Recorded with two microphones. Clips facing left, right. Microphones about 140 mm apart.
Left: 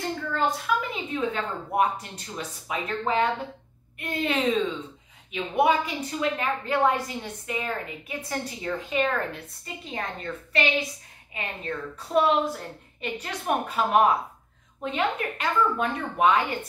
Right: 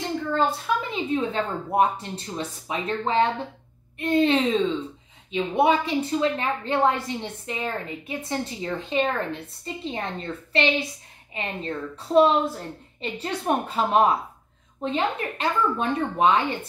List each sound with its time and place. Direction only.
0.4 s a woman's voice: 25° right (ahead or behind)